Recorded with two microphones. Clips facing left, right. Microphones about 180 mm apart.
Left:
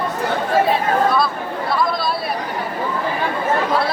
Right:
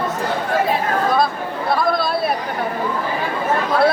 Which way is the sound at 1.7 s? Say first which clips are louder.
Right 2 dB; 55° right (ahead or behind).